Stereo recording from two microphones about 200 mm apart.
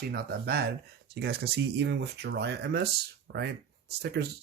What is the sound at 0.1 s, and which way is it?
Speech, 50° right (ahead or behind).